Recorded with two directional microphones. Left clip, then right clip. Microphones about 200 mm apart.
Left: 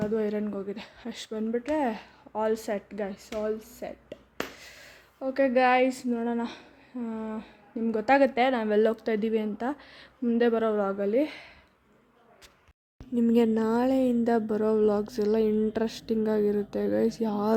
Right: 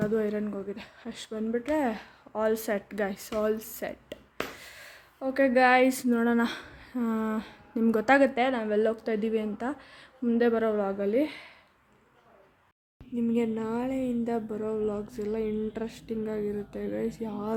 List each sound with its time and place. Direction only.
0.0 s speech: 5° left (ahead or behind)
4.4 s speech: 5° left (ahead or behind)
13.1 s a woman's voice: 30° left (ahead or behind)